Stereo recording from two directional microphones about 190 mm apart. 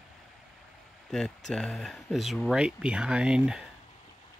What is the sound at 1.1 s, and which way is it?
Speech, centre (ahead or behind).